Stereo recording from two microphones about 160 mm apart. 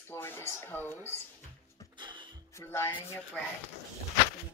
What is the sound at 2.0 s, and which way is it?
Music, 30° right (ahead or behind).